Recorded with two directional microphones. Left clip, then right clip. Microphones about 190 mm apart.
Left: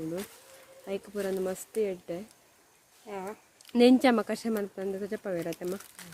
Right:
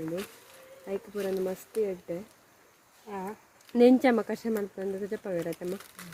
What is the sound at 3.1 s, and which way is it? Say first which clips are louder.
Speech: right 1 dB; 55° left (ahead or behind).